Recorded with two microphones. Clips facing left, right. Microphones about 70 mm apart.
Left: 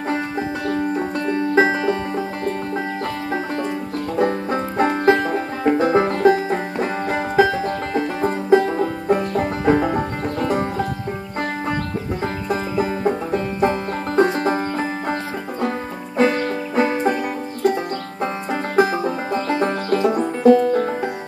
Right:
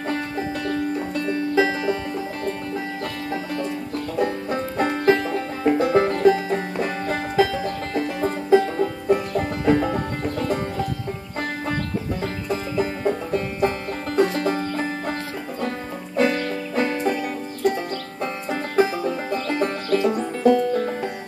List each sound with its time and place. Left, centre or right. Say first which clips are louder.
0.7 s music: left 5 dB; left
4.2 s music: left 4 dB; left
12.2 s music: left 3 dB; left
16.2 s music: left 3 dB; left
18.2 s banjo: left 4 dB; left
18.9 s music: left 3 dB; left
19.9 s banjo: left 2 dB; left